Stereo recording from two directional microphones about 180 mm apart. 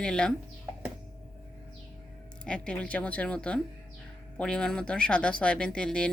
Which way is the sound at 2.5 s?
5° left (ahead or behind).